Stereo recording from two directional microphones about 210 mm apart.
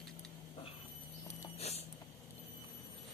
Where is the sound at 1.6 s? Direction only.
30° left (ahead or behind).